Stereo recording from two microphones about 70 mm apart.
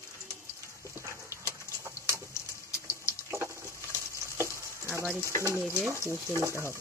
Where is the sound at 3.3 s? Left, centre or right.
Right.